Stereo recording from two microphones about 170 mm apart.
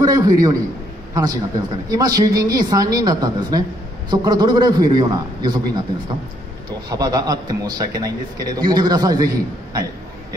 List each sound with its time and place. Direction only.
0.0 s a man's voice: 20° right (ahead or behind)
6.9 s speech: 25° right (ahead or behind)